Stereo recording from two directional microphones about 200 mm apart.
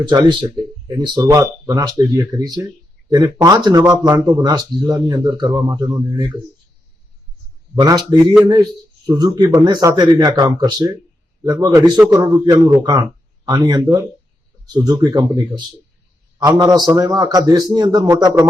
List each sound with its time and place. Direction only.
0.1 s a man's voice: 25° right (ahead or behind)
7.8 s a man's voice: 20° right (ahead or behind)